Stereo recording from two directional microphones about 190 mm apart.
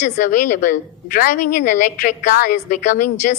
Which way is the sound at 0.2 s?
40° left (ahead or behind).